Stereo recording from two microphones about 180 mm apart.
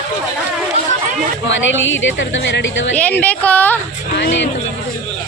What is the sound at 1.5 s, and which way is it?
A woman's voice, 90° left.